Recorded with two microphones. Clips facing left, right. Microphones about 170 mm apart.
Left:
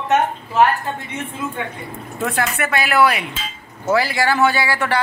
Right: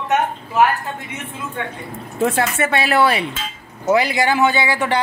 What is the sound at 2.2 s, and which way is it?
A man's voice, 25° right (ahead or behind).